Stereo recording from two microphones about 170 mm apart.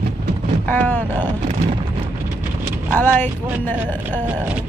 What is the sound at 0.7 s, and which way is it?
Speech, 10° left (ahead or behind).